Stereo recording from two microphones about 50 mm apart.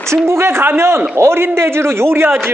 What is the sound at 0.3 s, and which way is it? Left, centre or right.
A man's voice, right.